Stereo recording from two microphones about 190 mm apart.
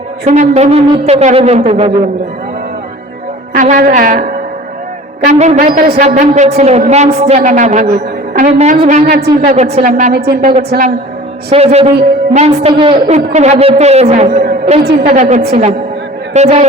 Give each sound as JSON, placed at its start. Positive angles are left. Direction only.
{"t": 0.3, "sound": "a man's voice", "side_deg": -35}
{"t": 3.5, "sound": "a woman's voice", "side_deg": -45}
{"t": 5.9, "sound": "a man's voice", "side_deg": -35}
{"t": 9.0, "sound": "a woman's voice", "side_deg": -55}
{"t": 10.1, "sound": "a woman's voice", "side_deg": -55}
{"t": 11.5, "sound": "a man's voice", "side_deg": -30}
{"t": 14.4, "sound": "music", "side_deg": -55}
{"t": 14.8, "sound": "a woman's voice", "side_deg": -50}